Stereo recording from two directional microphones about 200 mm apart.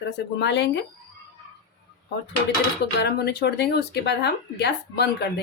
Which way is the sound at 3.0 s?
55° left (ahead or behind).